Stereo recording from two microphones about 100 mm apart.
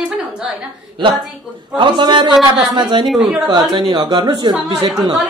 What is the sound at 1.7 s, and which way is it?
A woman's voice, 50° right (ahead or behind).